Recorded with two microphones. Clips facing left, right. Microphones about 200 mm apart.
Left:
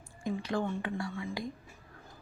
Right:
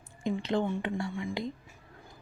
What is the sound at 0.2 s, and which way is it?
Speech, 20° right (ahead or behind).